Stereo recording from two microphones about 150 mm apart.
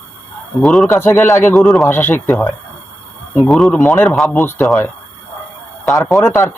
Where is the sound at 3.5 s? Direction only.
Centre (ahead or behind).